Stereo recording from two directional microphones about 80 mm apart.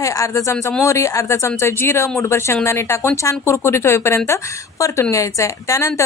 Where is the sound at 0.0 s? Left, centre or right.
Left.